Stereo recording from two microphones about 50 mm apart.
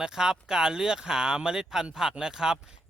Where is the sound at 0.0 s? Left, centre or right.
Centre.